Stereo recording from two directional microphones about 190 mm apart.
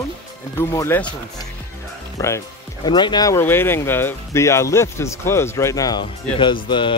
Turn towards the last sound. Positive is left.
turn(degrees=25)  # may be behind; listen again after turning